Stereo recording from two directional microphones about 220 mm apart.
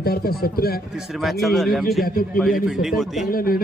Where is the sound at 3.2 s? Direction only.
40° left (ahead or behind).